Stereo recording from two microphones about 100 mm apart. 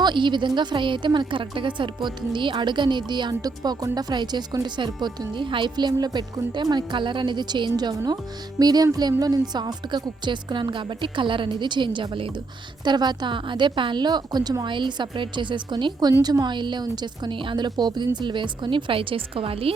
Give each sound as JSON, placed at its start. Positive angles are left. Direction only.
{"t": 0.0, "sound": "a woman's voice", "side_deg": -50}
{"t": 12.8, "sound": "a woman's voice", "side_deg": -45}